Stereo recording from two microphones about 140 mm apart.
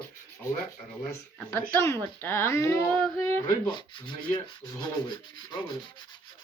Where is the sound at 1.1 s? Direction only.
15° left (ahead or behind).